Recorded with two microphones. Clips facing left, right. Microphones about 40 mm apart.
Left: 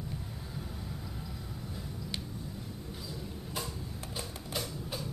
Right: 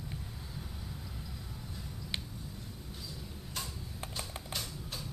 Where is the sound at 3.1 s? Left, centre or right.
Centre.